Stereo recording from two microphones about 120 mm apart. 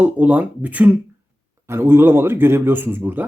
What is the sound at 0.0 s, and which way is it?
Speech, 10° right (ahead or behind).